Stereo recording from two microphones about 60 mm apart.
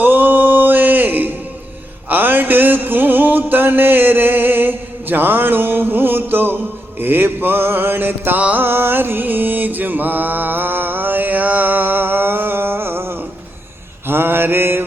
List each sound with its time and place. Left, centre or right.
0.0 s a sound: right
2.0 s music: right
7.0 s mantra: right
8.4 s music: right
8.6 s mantra: right